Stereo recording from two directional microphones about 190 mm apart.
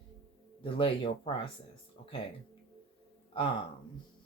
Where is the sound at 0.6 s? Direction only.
30° left (ahead or behind).